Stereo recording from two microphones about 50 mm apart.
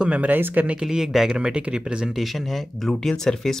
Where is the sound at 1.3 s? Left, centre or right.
Centre.